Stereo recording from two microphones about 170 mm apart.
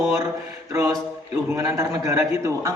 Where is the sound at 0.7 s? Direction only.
20° right (ahead or behind).